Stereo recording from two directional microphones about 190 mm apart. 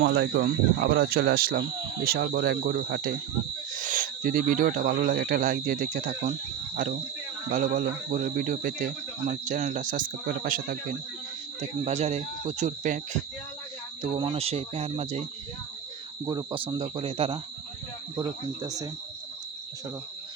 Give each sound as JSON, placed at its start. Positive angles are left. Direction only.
{"t": 0.0, "sound": "speech", "side_deg": -60}
{"t": 11.9, "sound": "speech", "side_deg": -35}
{"t": 14.0, "sound": "speech", "side_deg": -25}
{"t": 16.2, "sound": "speech", "side_deg": -25}